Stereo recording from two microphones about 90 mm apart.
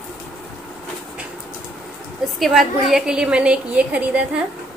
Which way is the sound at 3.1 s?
10° right (ahead or behind).